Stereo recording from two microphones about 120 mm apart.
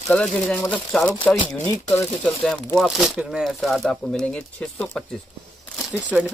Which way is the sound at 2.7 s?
Centre (ahead or behind).